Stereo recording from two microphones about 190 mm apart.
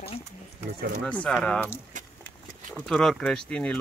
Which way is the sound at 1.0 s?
5° left (ahead or behind).